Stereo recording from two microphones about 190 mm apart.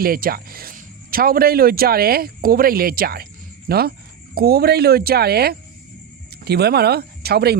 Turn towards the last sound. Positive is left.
turn(degrees=-55)  # may be behind; listen again after turning